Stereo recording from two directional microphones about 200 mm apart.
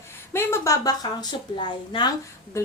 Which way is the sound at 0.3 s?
15° left (ahead or behind).